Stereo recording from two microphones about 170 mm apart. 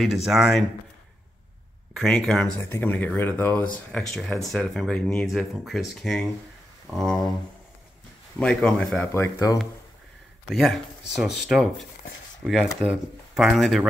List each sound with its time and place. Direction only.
0.0 s speech: centre (ahead or behind)
2.0 s speech: centre (ahead or behind)
8.4 s speech: 5° left (ahead or behind)
9.1 s speech: 15° left (ahead or behind)
10.5 s speech: centre (ahead or behind)